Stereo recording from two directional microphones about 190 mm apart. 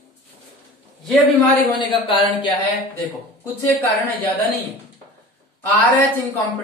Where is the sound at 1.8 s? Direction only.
25° left (ahead or behind).